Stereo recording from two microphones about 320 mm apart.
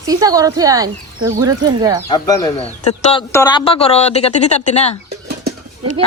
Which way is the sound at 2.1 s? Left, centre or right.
Centre.